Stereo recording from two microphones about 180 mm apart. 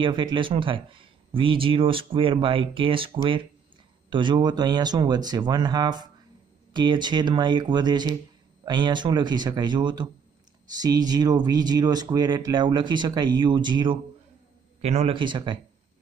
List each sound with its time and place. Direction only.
0.0 s speech: 25° right (ahead or behind)
14.8 s speech: 35° right (ahead or behind)